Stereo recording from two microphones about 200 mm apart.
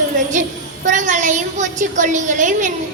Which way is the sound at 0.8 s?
40° right (ahead or behind).